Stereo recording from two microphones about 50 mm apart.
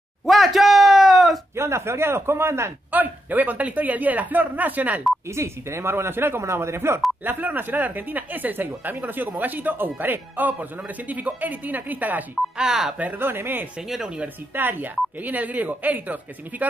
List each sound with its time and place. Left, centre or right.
0.2 s a sound: centre
1.5 s a man's voice: right
2.9 s speech: right
5.3 s a man's voice: right
6.4 s a man's voice: right
7.2 s speech: right
12.5 s speech: centre
13.2 s a man's voice: right
14.0 s speech: right
14.5 s speech: right